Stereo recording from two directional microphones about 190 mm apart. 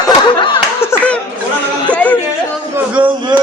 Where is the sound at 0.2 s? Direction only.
25° left (ahead or behind).